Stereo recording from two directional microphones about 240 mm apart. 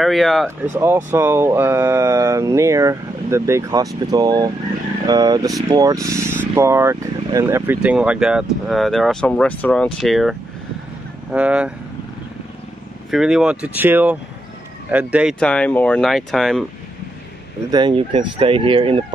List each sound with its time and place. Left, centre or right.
0.0 s speech: centre
0.7 s speech: centre
11.3 s speech: centre
13.1 s speech: centre
17.6 s speech: centre